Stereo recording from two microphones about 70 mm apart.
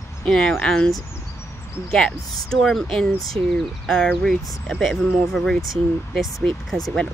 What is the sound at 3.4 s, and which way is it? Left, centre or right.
Speech, left.